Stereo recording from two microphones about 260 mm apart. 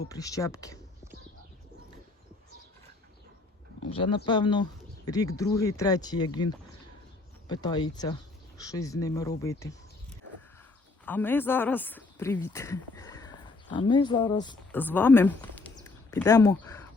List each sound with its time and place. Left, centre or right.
0.1 s speech: centre
3.8 s speech: centre
11.0 s speech: centre